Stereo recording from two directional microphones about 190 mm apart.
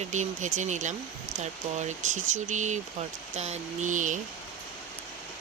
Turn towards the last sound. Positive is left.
turn(degrees=-40)  # may be behind; listen again after turning